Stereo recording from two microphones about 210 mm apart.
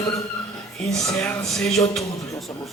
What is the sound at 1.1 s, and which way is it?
Speech, 5° left (ahead or behind).